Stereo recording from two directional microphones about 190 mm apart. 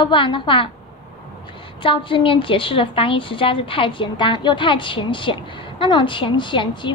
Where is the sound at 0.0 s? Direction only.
25° left (ahead or behind).